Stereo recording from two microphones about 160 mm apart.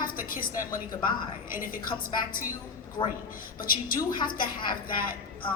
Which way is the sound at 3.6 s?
60° left (ahead or behind).